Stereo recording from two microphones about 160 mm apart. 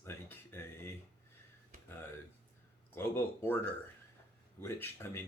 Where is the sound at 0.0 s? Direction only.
15° left (ahead or behind).